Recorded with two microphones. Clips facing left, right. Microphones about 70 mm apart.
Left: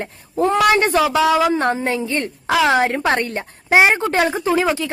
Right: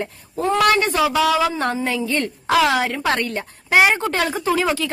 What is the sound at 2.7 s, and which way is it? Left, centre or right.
A woman's voice, left.